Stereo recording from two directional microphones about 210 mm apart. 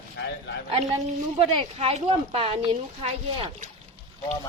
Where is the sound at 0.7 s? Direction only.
25° right (ahead or behind).